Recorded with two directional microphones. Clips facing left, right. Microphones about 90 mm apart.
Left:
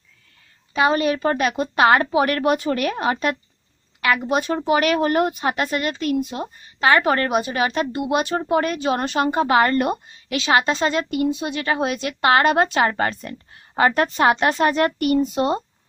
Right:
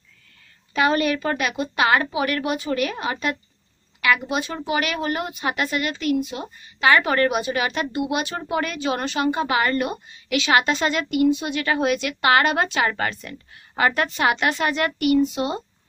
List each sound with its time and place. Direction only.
0.7 s a woman's voice: 25° left (ahead or behind); by 15.6 s 40° left (ahead or behind)